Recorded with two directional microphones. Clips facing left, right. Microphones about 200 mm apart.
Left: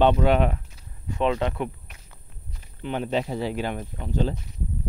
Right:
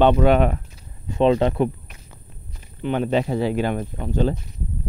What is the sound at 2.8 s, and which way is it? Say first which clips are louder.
Speech: right 5 dB; 60° right (ahead or behind).